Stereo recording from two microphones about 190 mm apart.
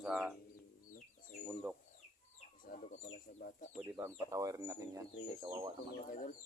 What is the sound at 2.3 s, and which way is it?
Chicken, 45° left (ahead or behind).